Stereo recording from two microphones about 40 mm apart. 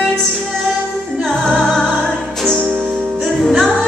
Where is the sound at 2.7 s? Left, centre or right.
Right.